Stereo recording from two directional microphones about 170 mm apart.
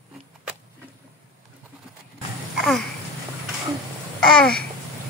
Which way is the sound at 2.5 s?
Centre (ahead or behind).